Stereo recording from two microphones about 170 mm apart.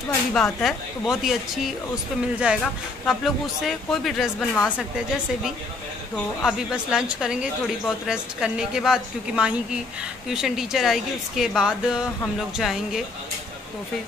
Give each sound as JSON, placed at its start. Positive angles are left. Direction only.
{"t": 0.3, "sound": "speech", "side_deg": 0}